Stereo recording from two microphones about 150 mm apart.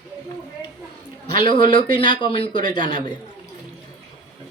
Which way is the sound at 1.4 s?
30° left (ahead or behind).